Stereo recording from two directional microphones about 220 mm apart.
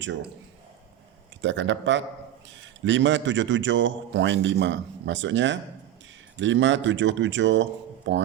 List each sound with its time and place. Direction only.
1.4 s a man's voice: 55° right (ahead or behind)